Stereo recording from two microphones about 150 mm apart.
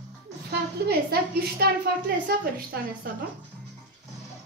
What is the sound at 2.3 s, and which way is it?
Speech, 90° right.